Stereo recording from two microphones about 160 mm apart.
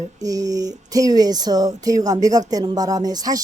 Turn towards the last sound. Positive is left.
turn(degrees=-25)  # may be behind; listen again after turning